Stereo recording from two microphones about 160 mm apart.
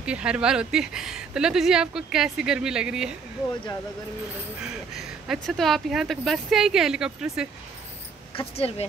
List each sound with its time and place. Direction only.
0.0 s speech: 5° right (ahead or behind)
4.9 s speech: centre (ahead or behind)
8.4 s speech: 40° left (ahead or behind)